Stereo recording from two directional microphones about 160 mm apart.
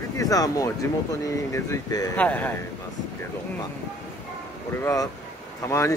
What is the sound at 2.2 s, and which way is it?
Speech, 10° left (ahead or behind).